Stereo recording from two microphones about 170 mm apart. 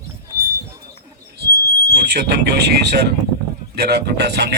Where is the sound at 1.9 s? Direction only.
75° right (ahead or behind).